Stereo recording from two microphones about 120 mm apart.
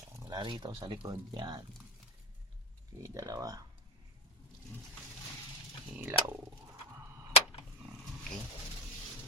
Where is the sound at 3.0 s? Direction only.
30° right (ahead or behind).